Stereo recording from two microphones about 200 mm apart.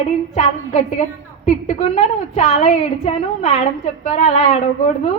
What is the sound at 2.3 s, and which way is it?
A woman's voice, 35° left (ahead or behind).